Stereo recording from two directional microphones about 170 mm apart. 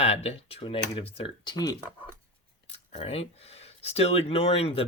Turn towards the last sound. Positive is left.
turn(degrees=35)  # may be behind; listen again after turning